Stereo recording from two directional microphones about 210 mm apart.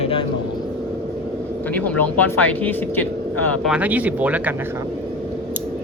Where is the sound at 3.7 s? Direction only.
5° right (ahead or behind).